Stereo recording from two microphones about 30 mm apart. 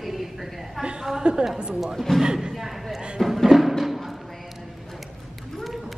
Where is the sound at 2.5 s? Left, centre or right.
Centre.